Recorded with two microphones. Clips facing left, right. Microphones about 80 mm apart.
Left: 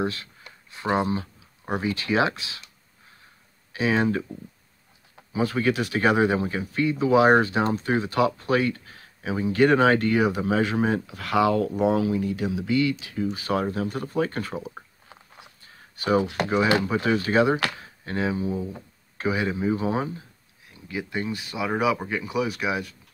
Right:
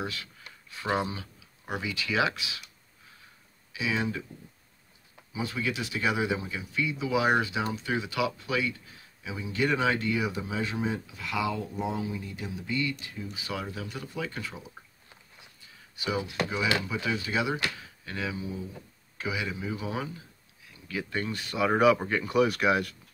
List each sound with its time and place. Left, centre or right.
0.0 s speech: left
3.7 s speech: left
5.3 s speech: left
13.4 s speech: left
16.0 s speech: left
16.3 s speech: left
20.9 s speech: centre